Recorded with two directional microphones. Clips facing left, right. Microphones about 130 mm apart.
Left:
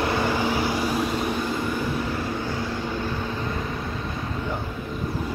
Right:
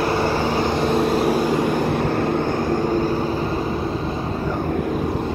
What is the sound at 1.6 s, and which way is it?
Vehicle, 60° right (ahead or behind).